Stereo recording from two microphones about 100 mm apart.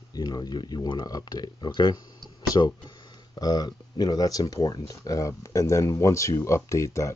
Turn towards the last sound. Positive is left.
turn(degrees=30)  # may be behind; listen again after turning